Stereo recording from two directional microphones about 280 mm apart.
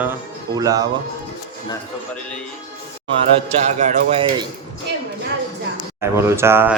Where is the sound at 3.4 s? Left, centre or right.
Right.